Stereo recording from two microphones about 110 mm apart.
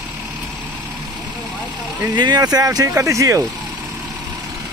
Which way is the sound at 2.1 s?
40° right (ahead or behind).